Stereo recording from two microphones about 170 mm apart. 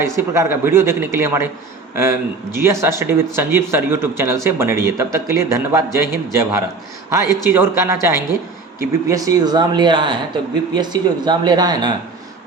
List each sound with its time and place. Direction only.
0.0 s speech: 15° right (ahead or behind)